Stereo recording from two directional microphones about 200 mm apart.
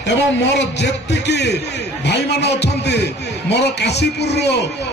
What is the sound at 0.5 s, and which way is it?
Speech, 60° left (ahead or behind).